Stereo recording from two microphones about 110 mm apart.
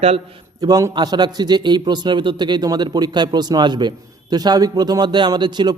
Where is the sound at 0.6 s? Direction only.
35° right (ahead or behind).